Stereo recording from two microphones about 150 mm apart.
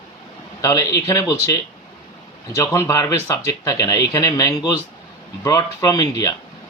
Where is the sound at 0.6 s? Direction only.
25° left (ahead or behind).